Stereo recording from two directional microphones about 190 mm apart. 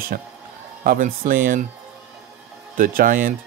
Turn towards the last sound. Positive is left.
turn(degrees=-45)  # may be behind; listen again after turning